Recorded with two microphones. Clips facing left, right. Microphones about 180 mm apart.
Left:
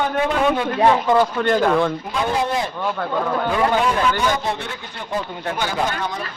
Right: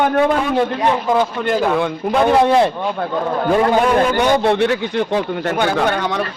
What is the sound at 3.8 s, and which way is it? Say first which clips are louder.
A man's voice: right 5 dB; 55° right (ahead or behind).